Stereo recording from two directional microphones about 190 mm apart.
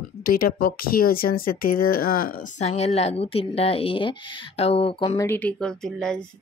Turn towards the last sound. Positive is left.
turn(degrees=5)  # may be behind; listen again after turning